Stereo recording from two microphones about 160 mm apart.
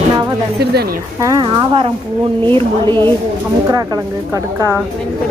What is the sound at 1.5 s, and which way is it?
Speech, 35° right (ahead or behind).